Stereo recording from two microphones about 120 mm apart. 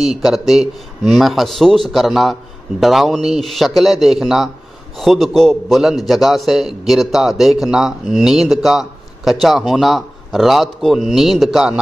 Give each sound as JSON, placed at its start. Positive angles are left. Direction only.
{"t": 0.0, "sound": "a man's voice", "side_deg": 0}